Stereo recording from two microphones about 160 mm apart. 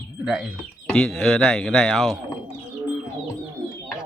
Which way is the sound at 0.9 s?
5° left (ahead or behind).